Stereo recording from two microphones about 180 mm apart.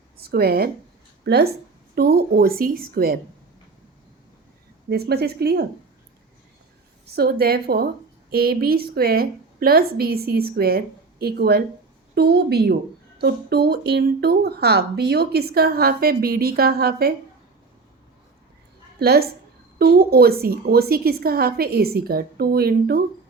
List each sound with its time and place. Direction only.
0.2 s speech: 60° right (ahead or behind)
4.9 s speech: 60° right (ahead or behind)
7.2 s speech: 60° right (ahead or behind)
18.9 s speech: 60° right (ahead or behind)